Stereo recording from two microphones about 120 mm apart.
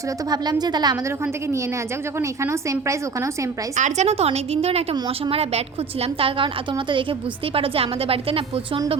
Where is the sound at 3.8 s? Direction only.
80° right.